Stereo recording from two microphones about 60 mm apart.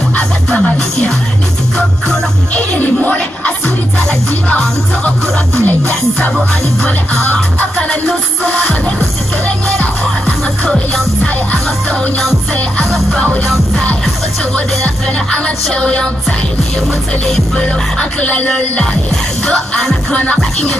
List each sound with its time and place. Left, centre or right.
0.1 s music: centre
2.5 s music: left
11.2 s music: left
13.1 s music: centre
15.7 s music: centre
17.6 s music: centre
19.4 s music: centre
20.1 s music: left